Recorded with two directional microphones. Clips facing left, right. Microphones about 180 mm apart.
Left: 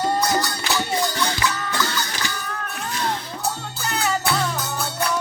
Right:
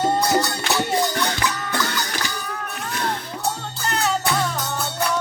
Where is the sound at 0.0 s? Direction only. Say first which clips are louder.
Right 2 dB; 25° right (ahead or behind).